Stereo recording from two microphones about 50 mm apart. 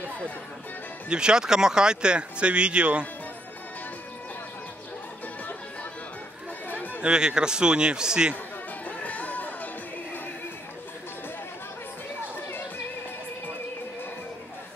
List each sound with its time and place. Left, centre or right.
1.0 s speech: centre
6.7 s chatter: left
7.0 s a man's voice: centre
8.8 s music: left